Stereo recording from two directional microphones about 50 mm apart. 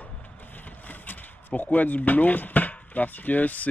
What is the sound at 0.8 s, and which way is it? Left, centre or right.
Speech, left.